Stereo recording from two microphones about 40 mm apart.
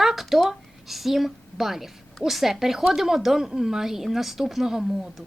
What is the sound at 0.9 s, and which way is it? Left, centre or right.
A woman's voice, centre.